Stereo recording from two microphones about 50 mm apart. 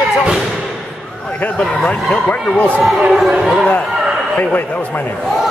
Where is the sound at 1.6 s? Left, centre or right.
Left.